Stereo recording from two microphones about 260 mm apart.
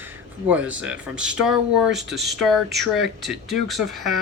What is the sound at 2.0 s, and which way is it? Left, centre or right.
Speech, right.